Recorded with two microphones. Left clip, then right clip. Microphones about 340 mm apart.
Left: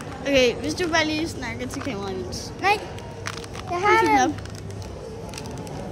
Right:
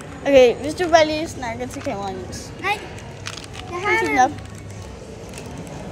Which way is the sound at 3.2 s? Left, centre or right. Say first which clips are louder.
Even; left.